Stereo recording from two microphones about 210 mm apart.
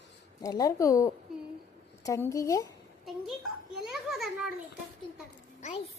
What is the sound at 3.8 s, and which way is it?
Children playing, centre (ahead or behind).